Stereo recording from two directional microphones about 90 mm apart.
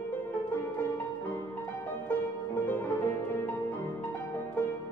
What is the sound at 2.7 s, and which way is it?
Music, 20° left (ahead or behind).